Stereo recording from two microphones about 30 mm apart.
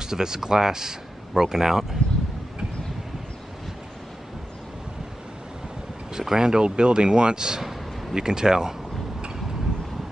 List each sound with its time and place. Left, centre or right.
0.0 s speech: right
6.1 s speech: right
6.6 s speech: right